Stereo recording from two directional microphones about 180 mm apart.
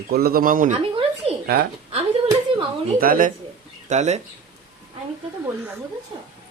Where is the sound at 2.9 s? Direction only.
55° right (ahead or behind).